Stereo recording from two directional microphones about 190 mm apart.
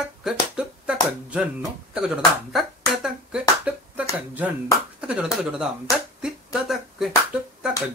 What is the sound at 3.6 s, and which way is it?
Finger snapping, 5° right (ahead or behind).